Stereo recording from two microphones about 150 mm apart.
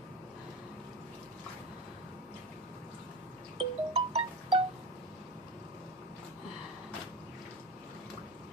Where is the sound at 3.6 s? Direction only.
40° right (ahead or behind).